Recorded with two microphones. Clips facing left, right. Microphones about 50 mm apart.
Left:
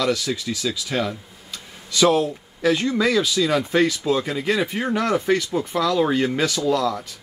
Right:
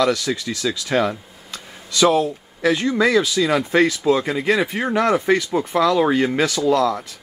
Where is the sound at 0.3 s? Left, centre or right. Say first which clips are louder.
Right 3 dB; centre.